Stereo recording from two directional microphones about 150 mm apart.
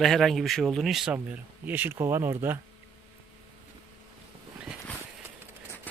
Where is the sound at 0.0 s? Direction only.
Centre (ahead or behind).